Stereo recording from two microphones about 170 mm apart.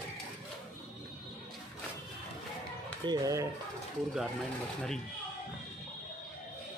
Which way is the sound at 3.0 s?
20° right (ahead or behind).